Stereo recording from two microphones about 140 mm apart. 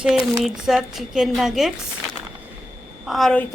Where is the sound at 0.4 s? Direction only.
5° right (ahead or behind).